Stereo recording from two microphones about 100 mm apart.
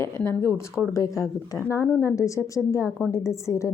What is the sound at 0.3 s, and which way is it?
A woman's voice, 30° left (ahead or behind).